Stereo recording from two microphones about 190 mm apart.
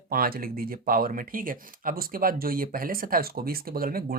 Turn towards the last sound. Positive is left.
turn(degrees=-50)  # may be behind; listen again after turning